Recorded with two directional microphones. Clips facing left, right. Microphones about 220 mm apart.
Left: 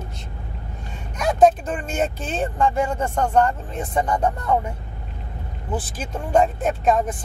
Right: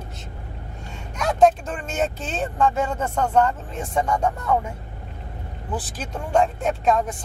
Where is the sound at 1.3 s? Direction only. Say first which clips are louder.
Left 2 dB; 5° left (ahead or behind).